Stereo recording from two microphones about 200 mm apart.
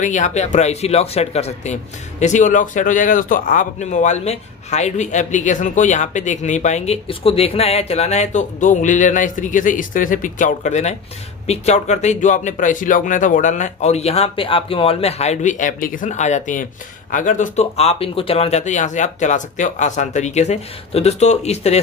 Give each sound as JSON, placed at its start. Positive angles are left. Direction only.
{"t": 0.0, "sound": "speech", "side_deg": 35}